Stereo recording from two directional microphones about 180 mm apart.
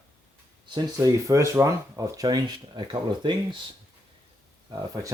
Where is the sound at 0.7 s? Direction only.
25° right (ahead or behind).